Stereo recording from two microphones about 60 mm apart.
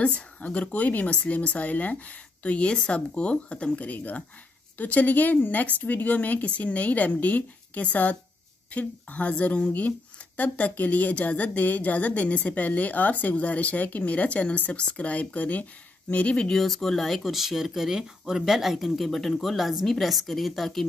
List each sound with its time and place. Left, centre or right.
0.0 s speech: centre